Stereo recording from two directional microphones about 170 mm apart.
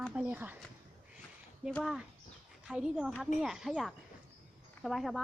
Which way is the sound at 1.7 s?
Centre (ahead or behind).